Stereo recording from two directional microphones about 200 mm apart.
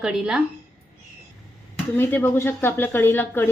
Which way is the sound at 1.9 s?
10° left (ahead or behind).